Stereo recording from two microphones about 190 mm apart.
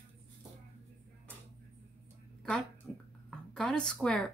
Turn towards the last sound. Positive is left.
turn(degrees=5)  # may be behind; listen again after turning